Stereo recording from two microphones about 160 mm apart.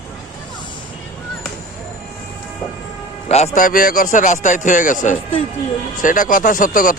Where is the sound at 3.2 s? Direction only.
45° left (ahead or behind).